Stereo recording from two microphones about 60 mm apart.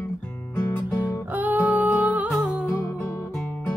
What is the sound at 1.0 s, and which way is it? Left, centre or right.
Music, right.